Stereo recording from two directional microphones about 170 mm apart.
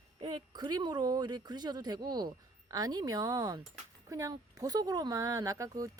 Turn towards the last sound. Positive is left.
turn(degrees=-20)  # may be behind; listen again after turning